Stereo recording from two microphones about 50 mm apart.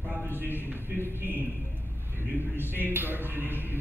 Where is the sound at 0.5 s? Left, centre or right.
Right.